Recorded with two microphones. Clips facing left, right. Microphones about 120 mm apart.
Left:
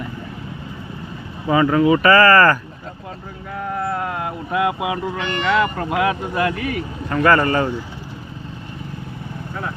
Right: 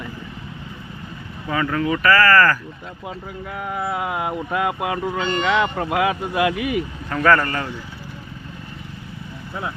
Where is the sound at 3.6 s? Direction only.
5° right (ahead or behind).